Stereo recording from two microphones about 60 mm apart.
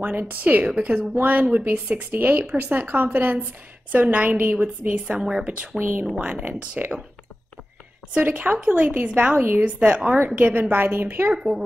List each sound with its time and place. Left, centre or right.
0.0 s a woman's voice: right
5.8 s a woman's voice: right
6.1 s speech: right
8.1 s a woman's voice: right
11.3 s speech: centre